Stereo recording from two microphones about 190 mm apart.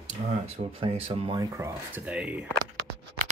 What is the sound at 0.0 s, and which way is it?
Speech, 35° right (ahead or behind).